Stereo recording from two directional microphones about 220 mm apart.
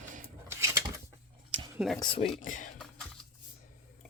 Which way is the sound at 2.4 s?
35° left (ahead or behind).